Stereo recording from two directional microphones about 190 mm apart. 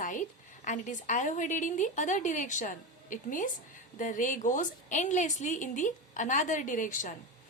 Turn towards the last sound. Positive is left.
turn(degrees=45)  # may be behind; listen again after turning